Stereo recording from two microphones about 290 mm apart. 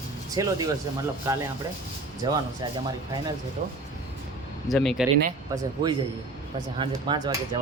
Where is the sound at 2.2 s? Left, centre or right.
Centre.